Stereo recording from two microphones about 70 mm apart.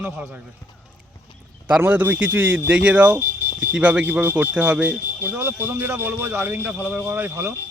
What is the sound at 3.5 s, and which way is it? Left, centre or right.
A man's voice, centre.